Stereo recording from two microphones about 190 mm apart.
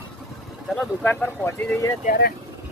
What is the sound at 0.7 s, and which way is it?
Speech, 5° left (ahead or behind).